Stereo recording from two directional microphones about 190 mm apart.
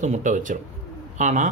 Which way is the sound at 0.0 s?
40° right (ahead or behind).